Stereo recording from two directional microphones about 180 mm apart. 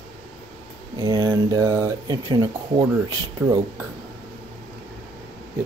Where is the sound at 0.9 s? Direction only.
20° right (ahead or behind).